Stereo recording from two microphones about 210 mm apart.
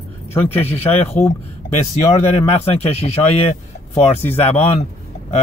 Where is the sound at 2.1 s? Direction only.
30° left (ahead or behind).